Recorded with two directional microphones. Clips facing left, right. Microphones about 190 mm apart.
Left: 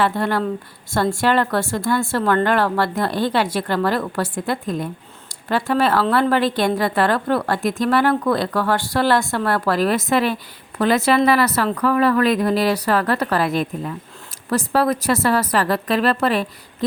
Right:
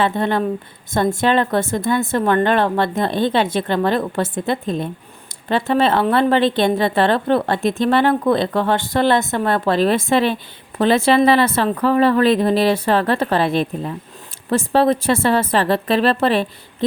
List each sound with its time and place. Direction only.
0.0 s a woman's voice: 20° right (ahead or behind)